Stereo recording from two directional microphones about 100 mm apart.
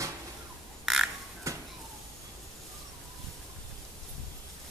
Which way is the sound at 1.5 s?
30° right (ahead or behind).